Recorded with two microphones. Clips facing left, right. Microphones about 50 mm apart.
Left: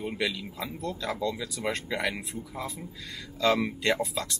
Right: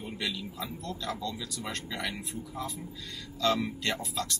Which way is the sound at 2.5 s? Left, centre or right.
Centre.